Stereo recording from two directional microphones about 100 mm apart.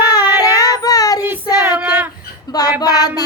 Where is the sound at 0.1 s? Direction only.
40° left (ahead or behind).